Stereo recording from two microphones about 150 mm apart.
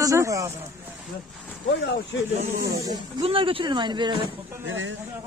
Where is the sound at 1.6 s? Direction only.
90° left.